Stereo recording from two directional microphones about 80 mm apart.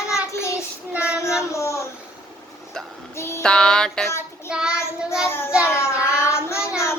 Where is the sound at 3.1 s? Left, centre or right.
Left.